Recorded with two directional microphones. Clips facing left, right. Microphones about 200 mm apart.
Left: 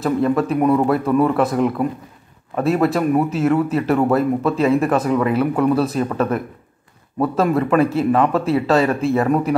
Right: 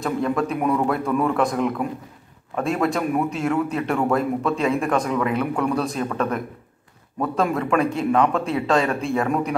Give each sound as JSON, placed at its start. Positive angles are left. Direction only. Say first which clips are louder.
{"t": 0.0, "sound": "speech", "louder": "left 5 dB", "side_deg": 5}
{"t": 7.3, "sound": "speech", "louder": "left 4 dB", "side_deg": 0}